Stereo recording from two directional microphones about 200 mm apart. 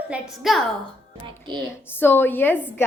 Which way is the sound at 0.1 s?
Centre (ahead or behind).